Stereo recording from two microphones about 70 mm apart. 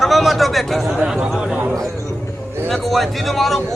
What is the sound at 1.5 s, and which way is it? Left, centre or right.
Speech, right.